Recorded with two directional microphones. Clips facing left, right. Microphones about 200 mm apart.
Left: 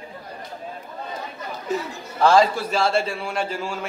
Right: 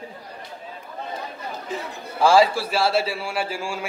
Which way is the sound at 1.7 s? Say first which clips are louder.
Left 6 dB; 40° left (ahead or behind).